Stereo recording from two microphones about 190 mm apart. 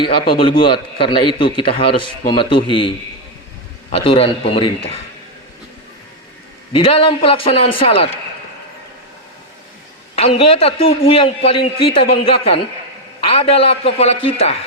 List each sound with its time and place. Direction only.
0.0 s a man's voice: 30° left (ahead or behind)
6.7 s a man's voice: 30° left (ahead or behind)
10.2 s a man's voice: 30° left (ahead or behind)
11.9 s speech: 55° left (ahead or behind)
13.2 s a man's voice: 30° left (ahead or behind)